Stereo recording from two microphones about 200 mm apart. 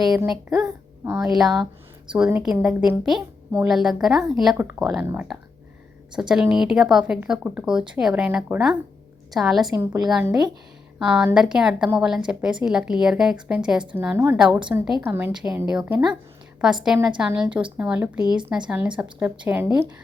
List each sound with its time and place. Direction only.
0.3 s a woman's voice: centre (ahead or behind)
1.0 s a woman's voice: 15° right (ahead or behind)
1.3 s a woman's voice: centre (ahead or behind)
9.7 s a woman's voice: 15° right (ahead or behind)
10.1 s a woman's voice: 5° right (ahead or behind)